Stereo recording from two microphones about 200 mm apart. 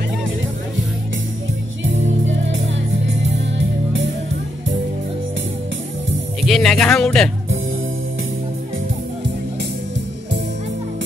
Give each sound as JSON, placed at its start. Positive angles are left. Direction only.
{"t": 1.9, "sound": "music", "side_deg": -70}
{"t": 6.4, "sound": "speech", "side_deg": 0}